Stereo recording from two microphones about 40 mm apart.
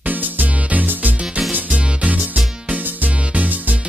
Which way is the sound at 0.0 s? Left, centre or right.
Right.